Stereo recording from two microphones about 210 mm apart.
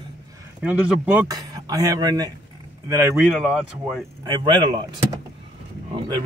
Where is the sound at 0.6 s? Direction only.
5° right (ahead or behind).